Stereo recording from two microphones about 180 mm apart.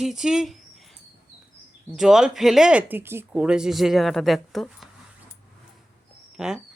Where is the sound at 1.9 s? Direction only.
Centre (ahead or behind).